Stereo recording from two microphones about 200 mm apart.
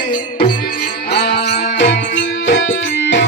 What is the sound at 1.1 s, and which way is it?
Music, 55° left (ahead or behind).